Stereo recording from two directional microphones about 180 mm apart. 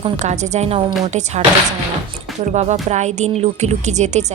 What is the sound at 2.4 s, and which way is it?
A woman's voice, 40° right (ahead or behind).